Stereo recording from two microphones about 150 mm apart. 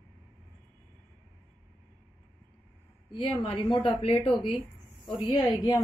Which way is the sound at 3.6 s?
30° left (ahead or behind).